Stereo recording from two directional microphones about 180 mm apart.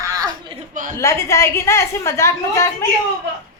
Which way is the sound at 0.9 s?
15° left (ahead or behind).